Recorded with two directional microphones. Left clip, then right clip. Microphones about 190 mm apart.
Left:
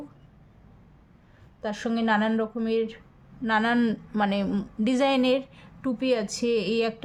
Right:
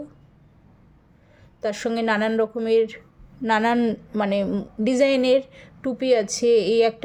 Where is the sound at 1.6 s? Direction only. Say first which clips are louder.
Right 5 dB; 30° right (ahead or behind).